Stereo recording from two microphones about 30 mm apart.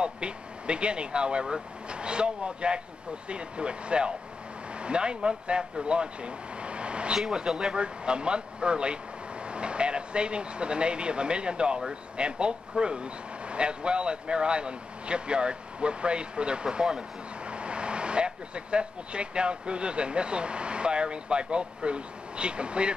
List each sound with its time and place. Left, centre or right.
0.0 s speech: right
7.2 s speech: right
7.7 s speech: right